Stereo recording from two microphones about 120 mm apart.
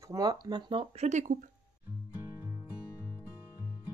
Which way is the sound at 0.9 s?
75° right (ahead or behind).